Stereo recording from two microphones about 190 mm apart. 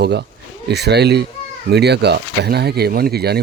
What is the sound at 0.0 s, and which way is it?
Speech, 60° right (ahead or behind).